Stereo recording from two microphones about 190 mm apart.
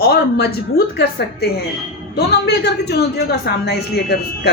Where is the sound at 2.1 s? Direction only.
60° left (ahead or behind).